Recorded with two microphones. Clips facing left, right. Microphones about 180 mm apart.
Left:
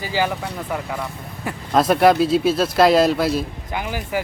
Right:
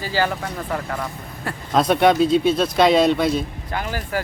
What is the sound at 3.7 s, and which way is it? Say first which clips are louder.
Speech: left 1 dB; 15° left (ahead or behind).